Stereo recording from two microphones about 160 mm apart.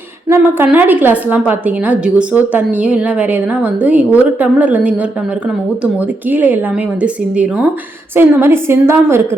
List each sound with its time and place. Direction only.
0.3 s a woman's voice: 10° right (ahead or behind)